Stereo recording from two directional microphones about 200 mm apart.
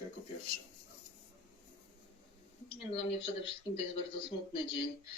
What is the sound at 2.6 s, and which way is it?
Speech, 30° left (ahead or behind).